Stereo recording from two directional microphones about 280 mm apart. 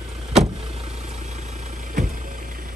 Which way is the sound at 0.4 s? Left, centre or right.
Right.